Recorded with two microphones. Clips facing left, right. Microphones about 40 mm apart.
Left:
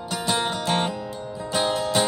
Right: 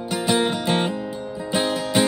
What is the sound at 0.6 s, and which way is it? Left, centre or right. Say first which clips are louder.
Music: right 2 dB; centre.